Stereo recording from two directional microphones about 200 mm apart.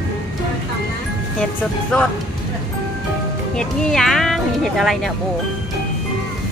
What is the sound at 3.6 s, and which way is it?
Speech, 5° left (ahead or behind).